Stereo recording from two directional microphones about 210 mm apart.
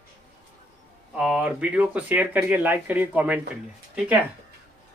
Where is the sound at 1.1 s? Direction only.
5° right (ahead or behind).